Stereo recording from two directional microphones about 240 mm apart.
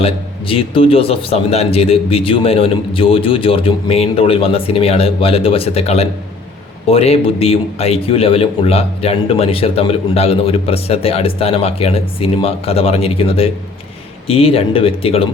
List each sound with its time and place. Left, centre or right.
0.0 s a man's voice: left